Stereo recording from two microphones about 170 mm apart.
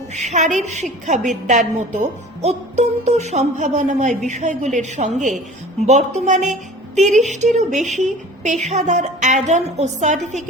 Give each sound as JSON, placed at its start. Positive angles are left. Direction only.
{"t": 0.1, "sound": "a woman's voice", "side_deg": -40}